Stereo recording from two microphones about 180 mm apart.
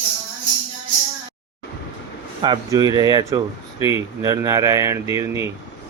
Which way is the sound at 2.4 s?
25° right (ahead or behind).